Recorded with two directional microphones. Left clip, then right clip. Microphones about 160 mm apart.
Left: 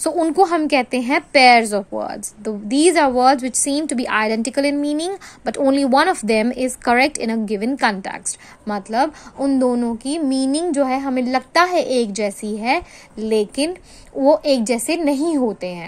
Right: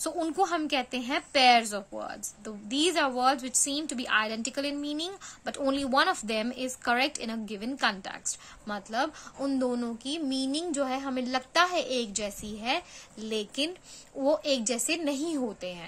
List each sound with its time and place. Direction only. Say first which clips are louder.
0.0 s a woman's voice: left 13 dB; 30° left (ahead or behind)